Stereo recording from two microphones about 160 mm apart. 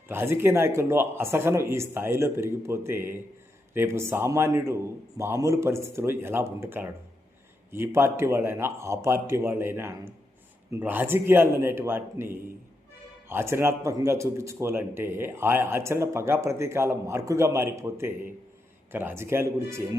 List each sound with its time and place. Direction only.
0.1 s speech: 15° right (ahead or behind)